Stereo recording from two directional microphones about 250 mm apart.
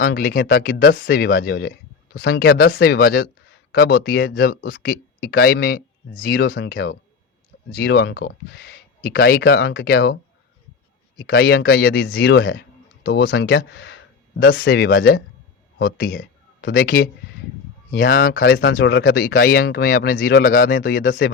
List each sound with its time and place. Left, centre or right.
0.0 s speech: left
11.2 s speech: left